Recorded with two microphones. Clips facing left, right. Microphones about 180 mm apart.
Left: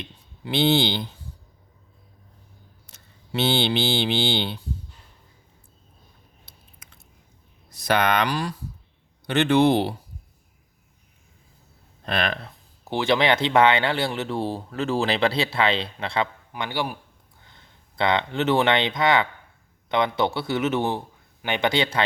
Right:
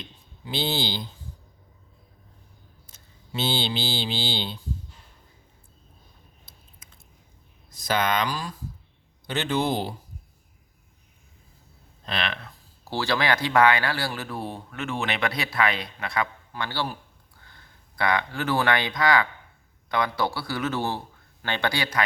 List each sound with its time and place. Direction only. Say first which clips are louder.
0.0 s a sound: left 5 dB; 65° left (ahead or behind)
2.8 s mantra: left 1 dB; 65° left (ahead or behind)
6.4 s biting: left 1 dB; 65° left (ahead or behind)
7.7 s a man's voice: left 3 dB; 65° left (ahead or behind)
12.0 s speech: left 5 dB; 45° left (ahead or behind)
12.5 s speech: left 4 dB; 20° left (ahead or behind)
16.5 s a man's voice: left 2 dB; 15° left (ahead or behind)